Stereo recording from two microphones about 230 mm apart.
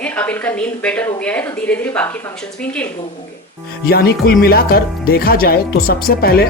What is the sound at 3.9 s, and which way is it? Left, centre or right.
Speech, left.